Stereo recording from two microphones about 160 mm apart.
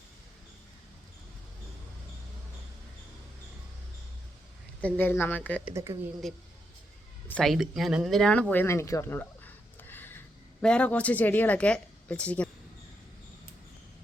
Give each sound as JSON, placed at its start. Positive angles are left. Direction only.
{"t": 4.8, "sound": "speech", "side_deg": 10}
{"t": 5.7, "sound": "speech", "side_deg": -20}
{"t": 6.2, "sound": "speech", "side_deg": 0}